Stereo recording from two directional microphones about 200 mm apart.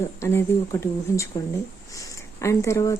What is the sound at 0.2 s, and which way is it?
Speech, 15° left (ahead or behind).